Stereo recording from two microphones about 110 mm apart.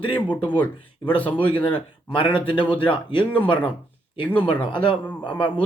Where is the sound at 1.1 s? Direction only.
50° left (ahead or behind).